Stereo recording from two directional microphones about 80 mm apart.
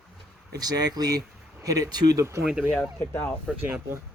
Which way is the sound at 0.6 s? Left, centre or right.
Right.